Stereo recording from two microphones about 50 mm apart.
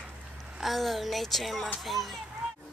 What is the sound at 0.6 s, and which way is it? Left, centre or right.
Speech, centre.